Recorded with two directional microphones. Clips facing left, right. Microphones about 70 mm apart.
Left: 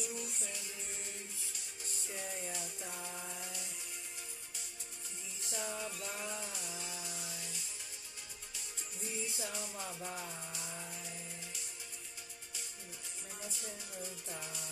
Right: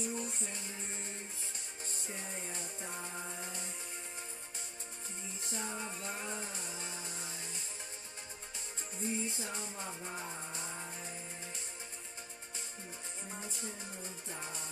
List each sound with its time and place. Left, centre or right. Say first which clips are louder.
0.0 s music: right 4 dB; right
5.4 s music: even; right
9.0 s chainsaw: right 4 dB; right
13.3 s music: right 2 dB; right